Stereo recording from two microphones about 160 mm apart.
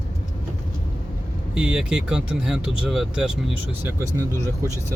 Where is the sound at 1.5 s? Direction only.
5° right (ahead or behind).